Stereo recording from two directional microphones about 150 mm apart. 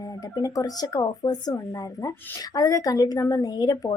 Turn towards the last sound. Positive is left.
turn(degrees=25)  # may be behind; listen again after turning